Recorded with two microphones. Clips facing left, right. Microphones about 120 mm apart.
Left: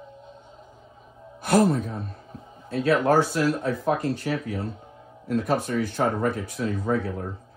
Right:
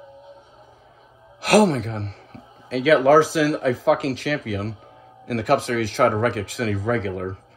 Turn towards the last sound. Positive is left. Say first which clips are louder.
# right 3 dB
turn(degrees=-90)